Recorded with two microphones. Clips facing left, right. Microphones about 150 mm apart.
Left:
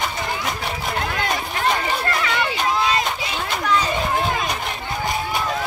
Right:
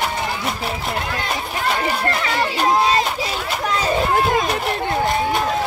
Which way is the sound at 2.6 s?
35° right (ahead or behind).